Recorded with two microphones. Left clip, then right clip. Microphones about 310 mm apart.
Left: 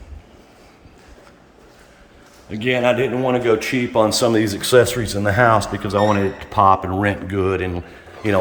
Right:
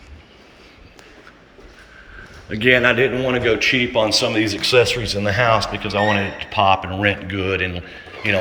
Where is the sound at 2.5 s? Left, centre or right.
Centre.